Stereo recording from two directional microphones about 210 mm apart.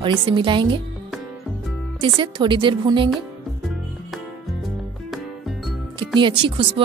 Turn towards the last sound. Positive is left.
turn(degrees=-25)  # may be behind; listen again after turning